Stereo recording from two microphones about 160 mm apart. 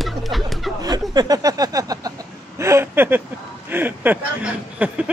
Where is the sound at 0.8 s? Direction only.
25° right (ahead or behind); by 5.0 s 10° right (ahead or behind).